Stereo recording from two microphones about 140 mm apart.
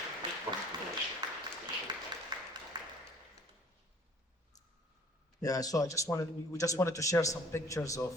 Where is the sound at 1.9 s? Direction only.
35° right (ahead or behind).